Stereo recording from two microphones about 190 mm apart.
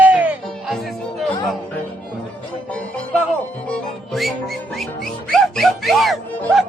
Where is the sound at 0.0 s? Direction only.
10° right (ahead or behind).